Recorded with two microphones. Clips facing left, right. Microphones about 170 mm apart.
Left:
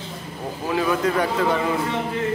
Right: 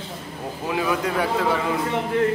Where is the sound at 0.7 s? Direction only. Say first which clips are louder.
Left 2 dB; 10° right (ahead or behind).